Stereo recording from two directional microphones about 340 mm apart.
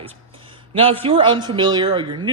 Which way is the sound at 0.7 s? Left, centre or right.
Centre.